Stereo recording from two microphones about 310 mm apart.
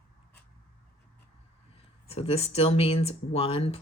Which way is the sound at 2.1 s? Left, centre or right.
Centre.